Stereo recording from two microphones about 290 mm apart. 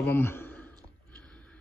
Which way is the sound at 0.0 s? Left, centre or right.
Centre.